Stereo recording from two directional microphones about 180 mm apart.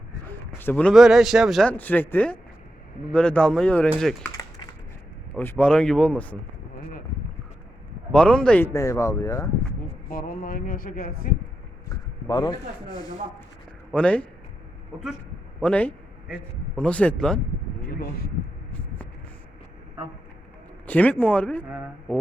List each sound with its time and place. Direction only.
0.6 s a man's voice: 10° left (ahead or behind)
4.2 s typing: 20° left (ahead or behind)
5.3 s a man's voice: 10° left (ahead or behind)
8.1 s a man's voice: 5° left (ahead or behind)
10.1 s a sound: 50° left (ahead or behind)
11.9 s speech: 25° left (ahead or behind)
13.9 s a man's voice: 5° left (ahead or behind)
15.6 s a man's voice: 10° left (ahead or behind)
20.8 s a man's voice: 10° left (ahead or behind)